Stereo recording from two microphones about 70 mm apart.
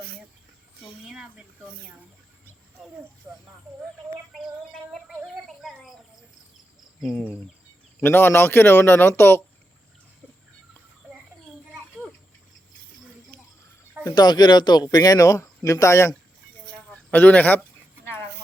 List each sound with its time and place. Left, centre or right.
1.1 s a sound: centre
3.3 s speech: right
4.4 s female singing: centre
5.0 s a sound: centre
7.9 s speech: left
14.0 s speech: left
14.9 s speech: left
15.2 s speech: left
16.7 s a sound: left